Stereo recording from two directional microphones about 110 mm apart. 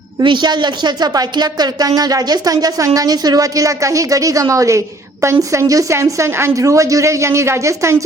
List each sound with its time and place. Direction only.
0.2 s a woman's voice: 40° right (ahead or behind); by 8.0 s 25° right (ahead or behind)